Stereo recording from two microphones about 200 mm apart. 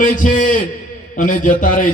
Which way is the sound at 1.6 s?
45° left (ahead or behind).